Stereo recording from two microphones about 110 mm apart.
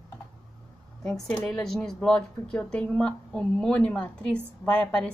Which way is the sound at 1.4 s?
5° left (ahead or behind).